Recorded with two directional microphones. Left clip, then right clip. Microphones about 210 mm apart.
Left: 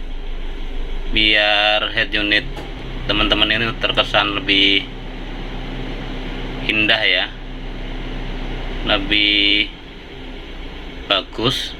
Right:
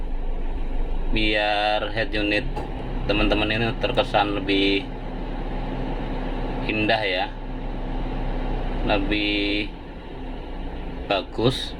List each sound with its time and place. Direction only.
1.1 s speech: 20° right (ahead or behind)
6.7 s speech: 20° right (ahead or behind)
8.9 s speech: 20° right (ahead or behind)